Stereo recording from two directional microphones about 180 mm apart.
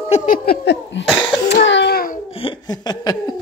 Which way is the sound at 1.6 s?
75° left (ahead or behind).